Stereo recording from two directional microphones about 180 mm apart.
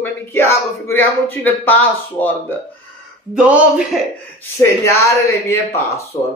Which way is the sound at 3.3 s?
5° right (ahead or behind).